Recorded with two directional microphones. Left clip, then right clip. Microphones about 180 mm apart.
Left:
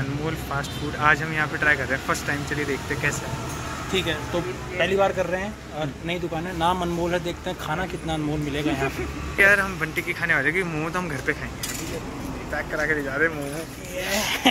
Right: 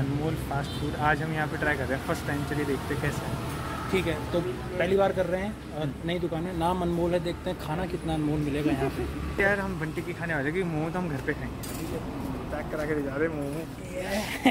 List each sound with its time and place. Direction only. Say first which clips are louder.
0.6 s speech: left 4 dB; 20° right (ahead or behind)
4.7 s speech: left 3 dB; centre (ahead or behind)
9.4 s speech: left 8 dB; 20° right (ahead or behind)
13.2 s speech: left 7 dB; 15° right (ahead or behind)
14.1 s speech: left 5 dB; 5° left (ahead or behind)